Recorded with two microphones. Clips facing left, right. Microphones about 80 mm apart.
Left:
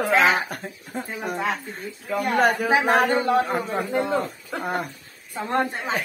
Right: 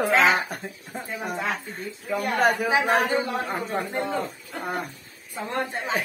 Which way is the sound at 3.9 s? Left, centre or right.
Left.